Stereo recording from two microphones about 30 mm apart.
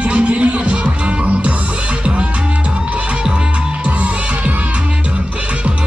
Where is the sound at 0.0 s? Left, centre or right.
Right.